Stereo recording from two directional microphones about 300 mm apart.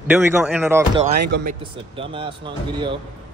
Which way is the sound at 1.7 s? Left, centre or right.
Centre.